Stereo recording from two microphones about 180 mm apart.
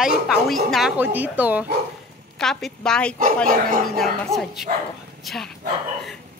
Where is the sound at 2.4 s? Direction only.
Centre (ahead or behind).